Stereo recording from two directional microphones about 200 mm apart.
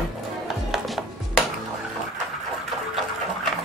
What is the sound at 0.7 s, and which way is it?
Music, centre (ahead or behind).